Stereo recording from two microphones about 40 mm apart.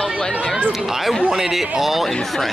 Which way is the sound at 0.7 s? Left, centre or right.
Centre.